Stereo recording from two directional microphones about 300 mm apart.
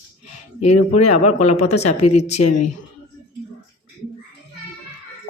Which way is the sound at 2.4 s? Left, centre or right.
Left.